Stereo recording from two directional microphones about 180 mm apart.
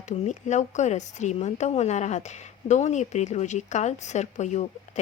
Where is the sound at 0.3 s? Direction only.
40° left (ahead or behind).